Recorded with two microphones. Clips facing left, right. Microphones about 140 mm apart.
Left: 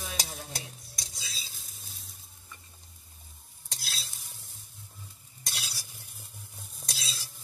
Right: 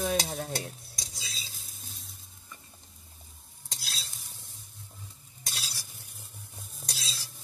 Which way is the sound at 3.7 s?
Centre (ahead or behind).